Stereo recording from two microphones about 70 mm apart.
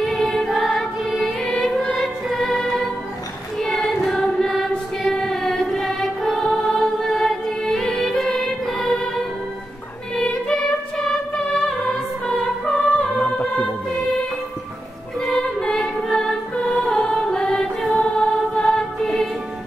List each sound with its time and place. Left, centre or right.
0.0 s music: centre
3.5 s choir: centre
10.1 s music: centre
13.0 s music: centre
15.1 s music: centre